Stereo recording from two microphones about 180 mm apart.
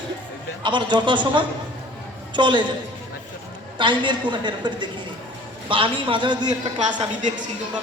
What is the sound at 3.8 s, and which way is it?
A woman's voice, 25° right (ahead or behind).